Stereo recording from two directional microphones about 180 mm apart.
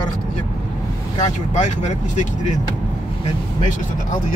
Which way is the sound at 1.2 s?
40° left (ahead or behind).